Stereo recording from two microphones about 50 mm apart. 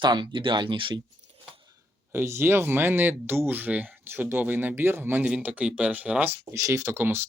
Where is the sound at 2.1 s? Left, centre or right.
Right.